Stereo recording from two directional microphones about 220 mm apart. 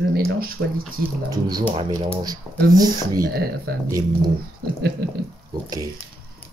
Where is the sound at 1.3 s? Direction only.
15° right (ahead or behind).